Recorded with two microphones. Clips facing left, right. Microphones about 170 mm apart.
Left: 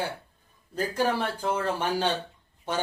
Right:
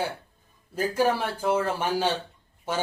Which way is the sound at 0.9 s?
10° right (ahead or behind).